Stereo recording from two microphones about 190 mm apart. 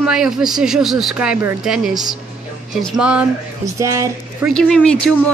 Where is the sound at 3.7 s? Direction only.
15° right (ahead or behind).